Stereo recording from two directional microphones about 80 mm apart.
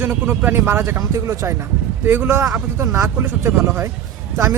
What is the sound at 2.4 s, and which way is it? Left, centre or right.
A man's voice, right.